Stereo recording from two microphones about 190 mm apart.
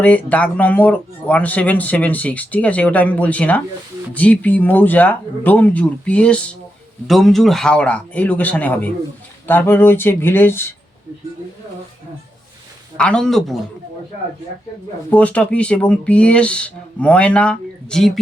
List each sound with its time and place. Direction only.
0.0 s speech: 10° left (ahead or behind)
13.0 s speech: 5° left (ahead or behind)
15.1 s speech: 5° left (ahead or behind)